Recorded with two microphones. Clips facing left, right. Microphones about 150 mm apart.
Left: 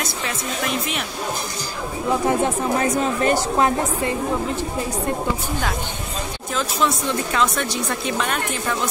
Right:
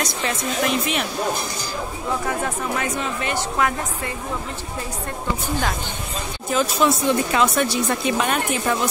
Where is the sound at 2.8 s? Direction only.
40° left (ahead or behind).